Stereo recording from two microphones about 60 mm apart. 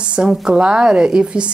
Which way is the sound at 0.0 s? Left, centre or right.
Centre.